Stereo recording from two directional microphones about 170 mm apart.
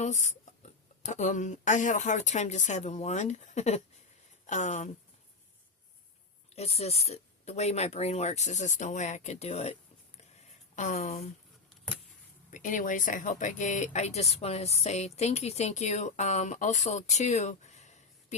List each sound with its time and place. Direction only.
0.0 s speech: 45° left (ahead or behind)
6.6 s speech: 40° left (ahead or behind)
10.8 s speech: 45° left (ahead or behind)
12.5 s speech: 50° left (ahead or behind)